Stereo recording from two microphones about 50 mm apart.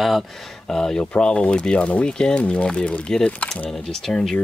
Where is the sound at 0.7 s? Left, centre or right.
Centre.